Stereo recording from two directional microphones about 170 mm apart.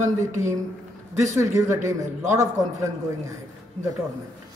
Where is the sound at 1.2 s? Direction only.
20° right (ahead or behind).